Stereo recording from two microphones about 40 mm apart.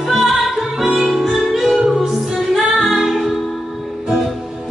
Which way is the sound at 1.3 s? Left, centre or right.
Centre.